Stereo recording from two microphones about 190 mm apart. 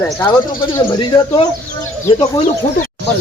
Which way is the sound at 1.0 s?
20° left (ahead or behind).